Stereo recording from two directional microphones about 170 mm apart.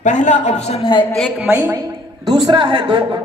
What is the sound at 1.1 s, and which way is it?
A woman's voice, centre (ahead or behind).